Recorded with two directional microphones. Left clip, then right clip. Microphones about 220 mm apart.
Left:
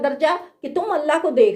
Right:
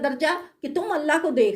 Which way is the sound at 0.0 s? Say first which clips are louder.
Left 4 dB; 40° right (ahead or behind).